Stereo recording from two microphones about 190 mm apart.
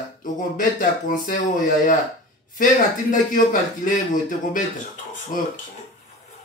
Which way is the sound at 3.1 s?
45° left (ahead or behind).